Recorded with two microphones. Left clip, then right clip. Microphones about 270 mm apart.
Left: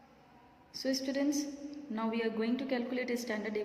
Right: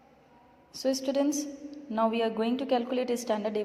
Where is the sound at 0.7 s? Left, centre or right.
Centre.